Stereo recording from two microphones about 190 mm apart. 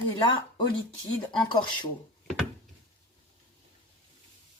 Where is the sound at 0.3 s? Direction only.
25° left (ahead or behind).